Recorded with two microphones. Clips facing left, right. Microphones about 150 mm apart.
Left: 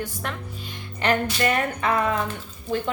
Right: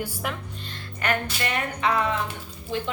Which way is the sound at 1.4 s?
45° left (ahead or behind).